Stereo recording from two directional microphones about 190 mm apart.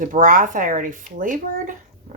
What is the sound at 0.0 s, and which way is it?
Speech, 45° right (ahead or behind).